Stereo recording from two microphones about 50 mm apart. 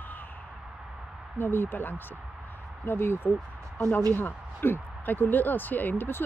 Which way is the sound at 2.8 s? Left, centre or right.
Left.